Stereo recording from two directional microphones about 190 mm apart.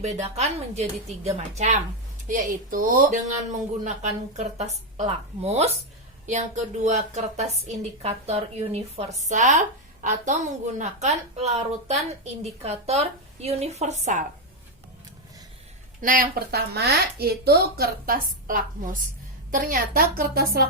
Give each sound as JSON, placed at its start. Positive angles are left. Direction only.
{"t": 0.0, "sound": "a woman's voice", "side_deg": -35}
{"t": 6.8, "sound": "a woman's voice", "side_deg": -35}
{"t": 16.0, "sound": "speech", "side_deg": -50}